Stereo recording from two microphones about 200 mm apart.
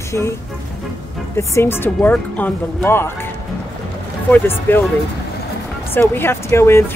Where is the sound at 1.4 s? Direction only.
15° left (ahead or behind).